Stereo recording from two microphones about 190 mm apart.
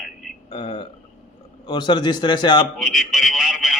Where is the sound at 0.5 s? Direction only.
25° left (ahead or behind).